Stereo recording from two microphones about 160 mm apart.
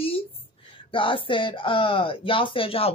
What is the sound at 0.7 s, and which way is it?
Speech, 30° left (ahead or behind).